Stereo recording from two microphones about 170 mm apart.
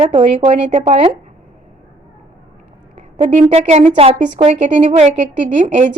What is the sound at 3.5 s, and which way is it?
A woman's voice, 40° right (ahead or behind).